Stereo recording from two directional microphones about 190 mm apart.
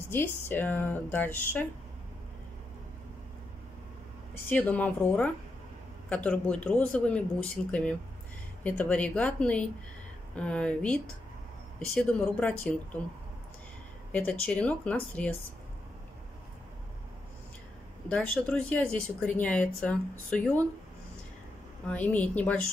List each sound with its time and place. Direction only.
0.1 s speech: 10° left (ahead or behind)
4.5 s speech: 10° left (ahead or behind)
14.1 s speech: 5° left (ahead or behind)
18.0 s speech: 5° left (ahead or behind)
21.8 s speech: 10° left (ahead or behind)